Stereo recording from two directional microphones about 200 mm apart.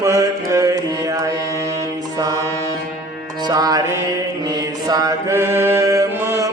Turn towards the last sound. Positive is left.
turn(degrees=-15)  # may be behind; listen again after turning